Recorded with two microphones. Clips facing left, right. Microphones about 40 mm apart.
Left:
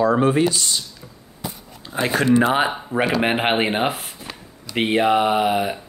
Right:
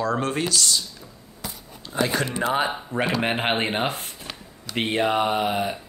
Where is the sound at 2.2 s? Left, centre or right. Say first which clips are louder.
Left 7 dB; left.